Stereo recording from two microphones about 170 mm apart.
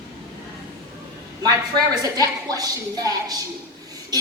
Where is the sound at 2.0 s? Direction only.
20° right (ahead or behind).